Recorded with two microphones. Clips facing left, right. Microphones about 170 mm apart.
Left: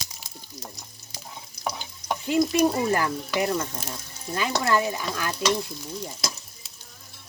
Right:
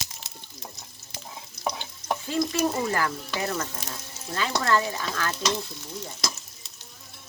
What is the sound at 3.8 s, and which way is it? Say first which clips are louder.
Speech: left 2 dB; 10° left (ahead or behind).